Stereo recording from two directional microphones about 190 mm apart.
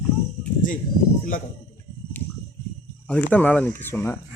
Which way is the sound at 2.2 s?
10° left (ahead or behind).